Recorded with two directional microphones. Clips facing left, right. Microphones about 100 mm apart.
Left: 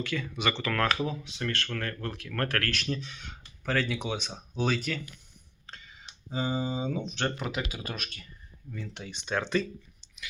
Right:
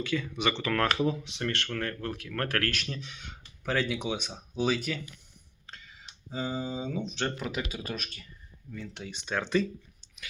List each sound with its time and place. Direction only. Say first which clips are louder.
0.0 s speech: right 1 dB; 15° right (ahead or behind)
5.6 s a sound: left 1 dB; centre (ahead or behind)
7.0 s speech: even; 50° left (ahead or behind)
7.3 s speech: even; centre (ahead or behind)